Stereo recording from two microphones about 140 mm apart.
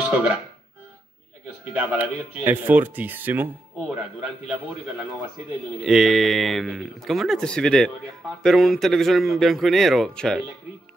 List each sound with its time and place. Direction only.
0.1 s speech: 10° right (ahead or behind)
1.6 s speech: 10° right (ahead or behind)
5.9 s speech: centre (ahead or behind)